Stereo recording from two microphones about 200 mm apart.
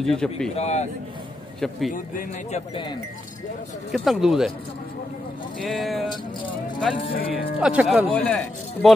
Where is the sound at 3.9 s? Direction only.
Centre (ahead or behind).